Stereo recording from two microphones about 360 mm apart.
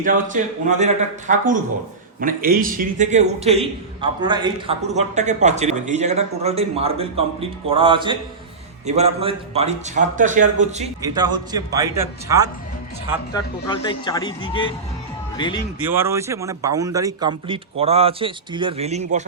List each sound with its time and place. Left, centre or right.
0.0 s a man's voice: right
13.3 s speech: centre
15.9 s a man's voice: centre